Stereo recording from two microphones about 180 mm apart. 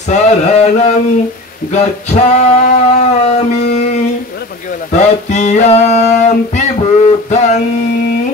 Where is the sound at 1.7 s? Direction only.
40° left (ahead or behind).